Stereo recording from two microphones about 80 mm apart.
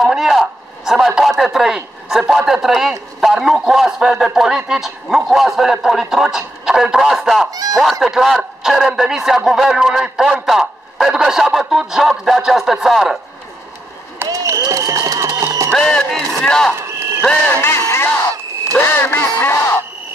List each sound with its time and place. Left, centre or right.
0.0 s speech: centre
14.3 s a sound: right
15.7 s speech: centre
16.7 s a sound: right
17.5 s speech: left
18.9 s quack: left